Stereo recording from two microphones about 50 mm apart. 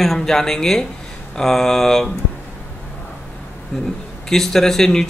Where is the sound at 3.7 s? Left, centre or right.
Centre.